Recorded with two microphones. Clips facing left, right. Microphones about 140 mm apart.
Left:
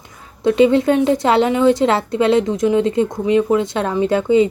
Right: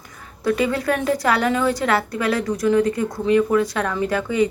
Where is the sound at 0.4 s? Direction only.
25° left (ahead or behind).